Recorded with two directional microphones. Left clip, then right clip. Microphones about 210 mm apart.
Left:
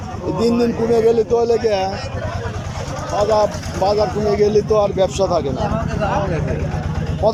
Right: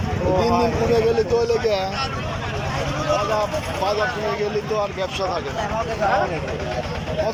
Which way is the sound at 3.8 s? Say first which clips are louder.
Left 7 dB; 20° left (ahead or behind).